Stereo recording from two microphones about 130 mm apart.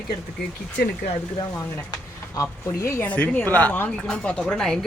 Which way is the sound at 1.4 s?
30° left (ahead or behind).